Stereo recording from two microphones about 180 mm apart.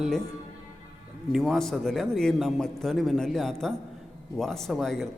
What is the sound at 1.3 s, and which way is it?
Speech, centre (ahead or behind).